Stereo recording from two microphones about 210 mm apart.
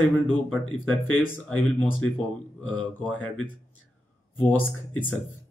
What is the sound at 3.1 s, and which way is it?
Speech, 5° left (ahead or behind).